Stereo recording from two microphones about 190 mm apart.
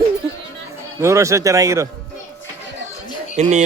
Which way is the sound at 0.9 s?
15° right (ahead or behind).